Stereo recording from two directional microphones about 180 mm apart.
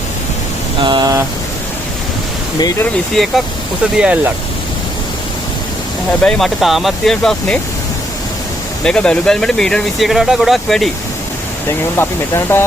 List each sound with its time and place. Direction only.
0.8 s a sound: 25° right (ahead or behind)
2.6 s speech: 20° left (ahead or behind)
2.8 s speech: centre (ahead or behind)
6.2 s speech: centre (ahead or behind)
8.8 s speech: 5° left (ahead or behind)
11.9 s speech: 15° left (ahead or behind)